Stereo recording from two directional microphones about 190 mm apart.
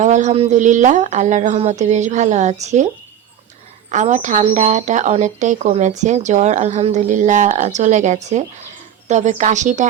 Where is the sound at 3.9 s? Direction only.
40° right (ahead or behind).